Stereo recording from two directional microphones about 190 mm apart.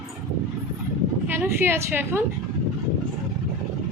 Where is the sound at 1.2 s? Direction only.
10° right (ahead or behind).